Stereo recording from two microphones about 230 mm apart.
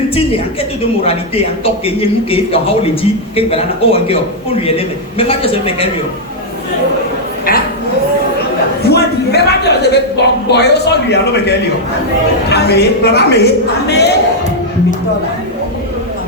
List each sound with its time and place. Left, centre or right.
0.3 s a man's voice: left
8.9 s a sound: left
12.5 s a man's voice: left